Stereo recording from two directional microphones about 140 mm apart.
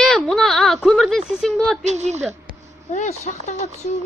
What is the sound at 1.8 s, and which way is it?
Speech, 55° right (ahead or behind).